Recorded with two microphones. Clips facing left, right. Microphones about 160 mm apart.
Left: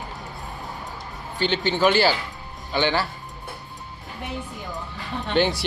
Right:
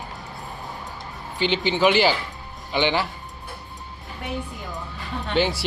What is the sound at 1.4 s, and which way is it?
Speech, 45° left (ahead or behind).